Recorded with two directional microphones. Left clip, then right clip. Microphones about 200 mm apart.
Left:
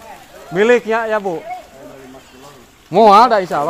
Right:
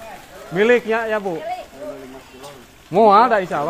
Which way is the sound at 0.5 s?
20° left (ahead or behind).